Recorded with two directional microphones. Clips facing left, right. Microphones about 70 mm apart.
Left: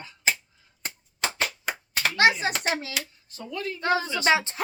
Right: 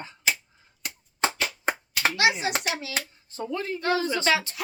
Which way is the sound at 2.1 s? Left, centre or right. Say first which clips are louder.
Left 4 dB; left.